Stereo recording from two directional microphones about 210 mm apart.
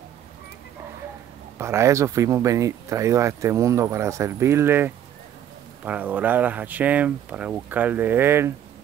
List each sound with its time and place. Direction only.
1.6 s speech: 15° right (ahead or behind)